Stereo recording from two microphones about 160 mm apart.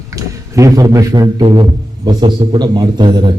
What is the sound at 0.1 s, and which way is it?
A man's voice, 20° right (ahead or behind).